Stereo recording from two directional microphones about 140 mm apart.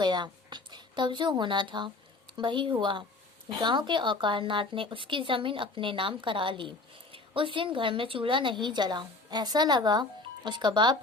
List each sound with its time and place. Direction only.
0.0 s a woman's voice: 30° right (ahead or behind)